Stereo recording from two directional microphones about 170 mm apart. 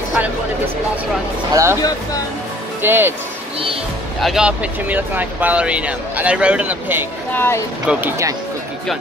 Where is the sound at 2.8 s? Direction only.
15° right (ahead or behind).